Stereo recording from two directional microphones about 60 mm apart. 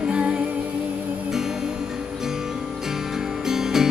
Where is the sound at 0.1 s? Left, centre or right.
Centre.